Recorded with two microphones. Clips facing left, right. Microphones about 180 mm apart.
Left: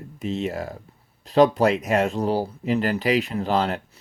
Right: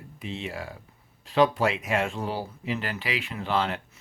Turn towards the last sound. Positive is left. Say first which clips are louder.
# left 4 dB
turn(degrees=40)  # may be behind; listen again after turning